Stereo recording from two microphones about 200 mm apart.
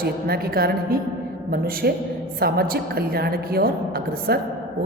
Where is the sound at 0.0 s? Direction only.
50° right (ahead or behind).